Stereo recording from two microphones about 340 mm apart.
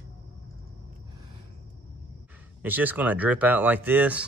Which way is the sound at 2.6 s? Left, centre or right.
Centre.